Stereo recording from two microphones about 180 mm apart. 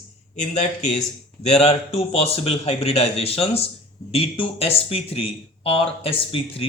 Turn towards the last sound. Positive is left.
turn(degrees=30)  # may be behind; listen again after turning